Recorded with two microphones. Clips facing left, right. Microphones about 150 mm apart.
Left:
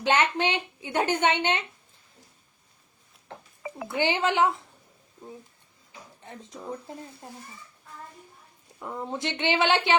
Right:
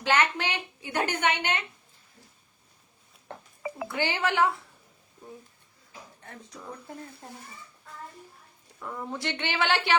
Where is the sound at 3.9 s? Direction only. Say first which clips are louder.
Left 4 dB; 20° left (ahead or behind).